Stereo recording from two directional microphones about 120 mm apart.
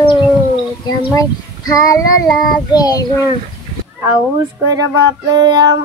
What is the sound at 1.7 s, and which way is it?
Child singing, 30° left (ahead or behind).